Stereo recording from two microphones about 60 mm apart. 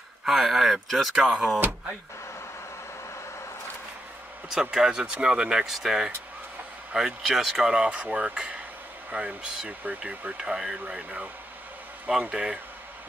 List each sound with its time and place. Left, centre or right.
0.2 s speech: centre
4.5 s speech: centre
11.0 s speech: right